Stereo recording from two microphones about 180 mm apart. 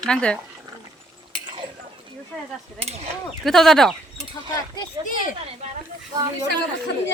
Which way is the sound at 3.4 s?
Centre (ahead or behind).